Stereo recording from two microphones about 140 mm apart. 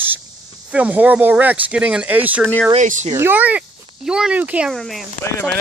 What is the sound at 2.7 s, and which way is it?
Speech, 60° right (ahead or behind).